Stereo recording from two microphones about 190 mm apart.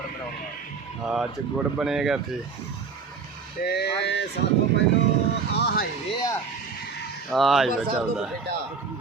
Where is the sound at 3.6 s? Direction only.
60° left (ahead or behind).